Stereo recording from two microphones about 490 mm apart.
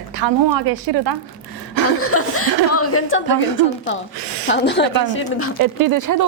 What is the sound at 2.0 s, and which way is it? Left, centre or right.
Speech, left.